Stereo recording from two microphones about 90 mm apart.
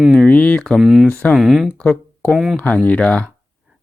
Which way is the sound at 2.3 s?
5° right (ahead or behind).